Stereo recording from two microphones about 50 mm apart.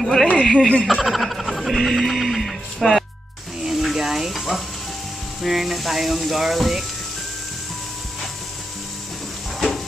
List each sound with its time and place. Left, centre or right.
0.0 s speech: centre
0.3 s speech: centre
0.8 s music: centre
3.6 s a sound: centre
5.4 s speech: centre